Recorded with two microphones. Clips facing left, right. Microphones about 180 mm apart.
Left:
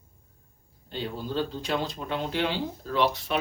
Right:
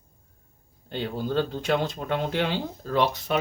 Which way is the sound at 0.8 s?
55° right (ahead or behind).